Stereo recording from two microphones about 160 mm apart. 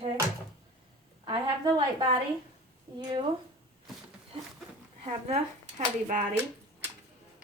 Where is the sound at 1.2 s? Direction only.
30° right (ahead or behind).